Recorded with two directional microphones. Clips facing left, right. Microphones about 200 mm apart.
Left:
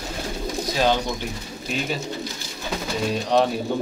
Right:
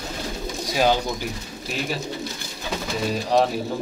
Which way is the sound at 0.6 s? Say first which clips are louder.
Right 1 dB; 10° right (ahead or behind).